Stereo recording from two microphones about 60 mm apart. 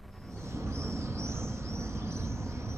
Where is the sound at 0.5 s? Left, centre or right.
Right.